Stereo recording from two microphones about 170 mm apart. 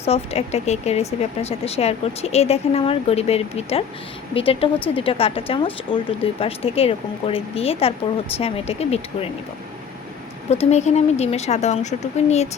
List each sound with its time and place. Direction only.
0.0 s speech: 35° left (ahead or behind)
10.5 s speech: 40° left (ahead or behind)